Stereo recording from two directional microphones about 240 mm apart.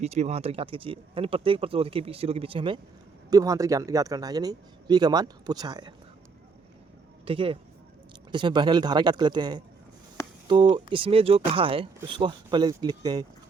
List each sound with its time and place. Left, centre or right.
0.0 s a man's voice: right
7.3 s a man's voice: right
10.2 s a sound: centre
10.5 s a man's voice: centre